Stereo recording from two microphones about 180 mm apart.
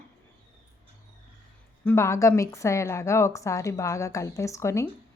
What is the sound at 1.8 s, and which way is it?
A woman's voice, 10° left (ahead or behind).